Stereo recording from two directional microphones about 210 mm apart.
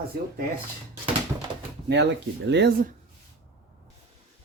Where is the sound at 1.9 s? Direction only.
55° right (ahead or behind).